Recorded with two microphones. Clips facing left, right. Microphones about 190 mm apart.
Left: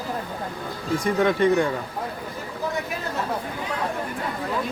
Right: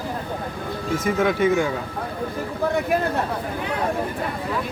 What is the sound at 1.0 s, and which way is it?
Speech, 5° right (ahead or behind).